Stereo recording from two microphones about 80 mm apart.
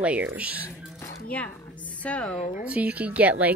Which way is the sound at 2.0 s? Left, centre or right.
Centre.